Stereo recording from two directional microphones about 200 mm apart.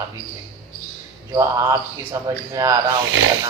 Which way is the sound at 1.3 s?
15° right (ahead or behind).